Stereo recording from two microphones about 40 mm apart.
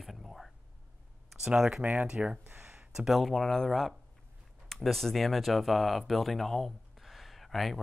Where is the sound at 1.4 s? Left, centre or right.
Centre.